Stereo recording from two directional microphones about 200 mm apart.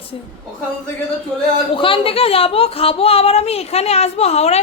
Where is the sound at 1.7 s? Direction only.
25° left (ahead or behind).